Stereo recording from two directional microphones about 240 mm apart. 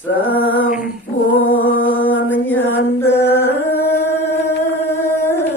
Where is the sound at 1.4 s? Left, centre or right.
Left.